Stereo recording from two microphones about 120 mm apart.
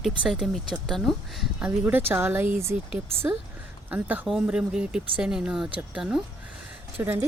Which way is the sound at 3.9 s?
15° right (ahead or behind).